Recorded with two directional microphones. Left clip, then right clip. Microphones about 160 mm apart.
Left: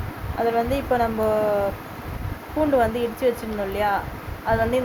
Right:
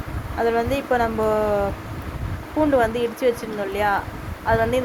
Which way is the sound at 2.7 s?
5° right (ahead or behind).